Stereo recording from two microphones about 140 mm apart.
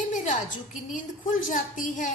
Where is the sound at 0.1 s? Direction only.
65° left (ahead or behind).